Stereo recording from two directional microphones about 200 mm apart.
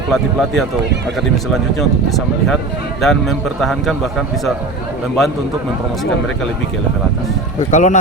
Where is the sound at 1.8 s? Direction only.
Centre (ahead or behind).